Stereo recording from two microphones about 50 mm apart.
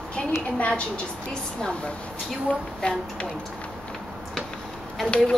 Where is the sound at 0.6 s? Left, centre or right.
Left.